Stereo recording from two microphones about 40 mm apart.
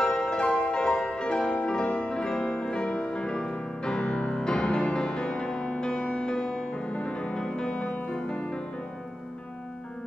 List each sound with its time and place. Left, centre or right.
0.0 s music: left
7.2 s music: centre